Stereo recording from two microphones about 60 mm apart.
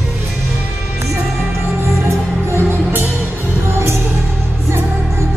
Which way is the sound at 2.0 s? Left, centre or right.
Right.